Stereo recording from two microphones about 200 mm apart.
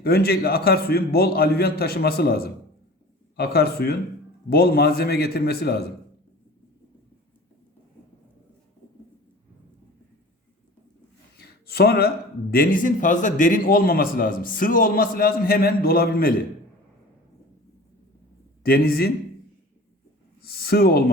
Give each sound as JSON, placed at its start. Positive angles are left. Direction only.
{"t": 0.0, "sound": "speech", "side_deg": 50}
{"t": 11.3, "sound": "speech", "side_deg": 50}
{"t": 18.6, "sound": "speech", "side_deg": 50}
{"t": 20.4, "sound": "a sound", "side_deg": 50}